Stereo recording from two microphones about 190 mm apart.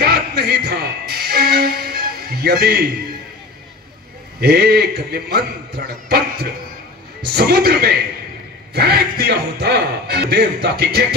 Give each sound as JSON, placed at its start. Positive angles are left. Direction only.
{"t": 0.0, "sound": "music", "side_deg": -55}
{"t": 4.4, "sound": "speech", "side_deg": -55}